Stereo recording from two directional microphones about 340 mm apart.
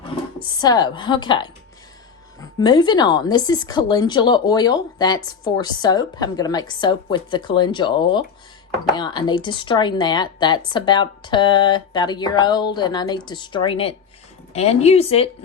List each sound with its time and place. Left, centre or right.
0.3 s speech: centre